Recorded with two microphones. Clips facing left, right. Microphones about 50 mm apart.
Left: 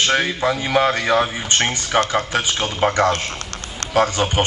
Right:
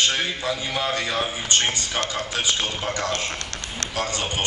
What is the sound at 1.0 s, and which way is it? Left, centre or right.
A man's voice, left.